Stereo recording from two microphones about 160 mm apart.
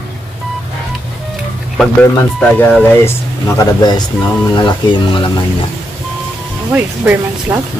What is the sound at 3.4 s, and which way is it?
Speech, 20° left (ahead or behind).